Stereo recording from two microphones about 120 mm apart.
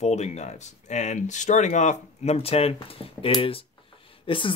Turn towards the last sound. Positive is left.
turn(degrees=45)  # may be behind; listen again after turning